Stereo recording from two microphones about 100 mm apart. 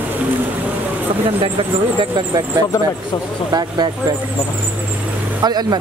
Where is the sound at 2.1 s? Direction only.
45° right (ahead or behind).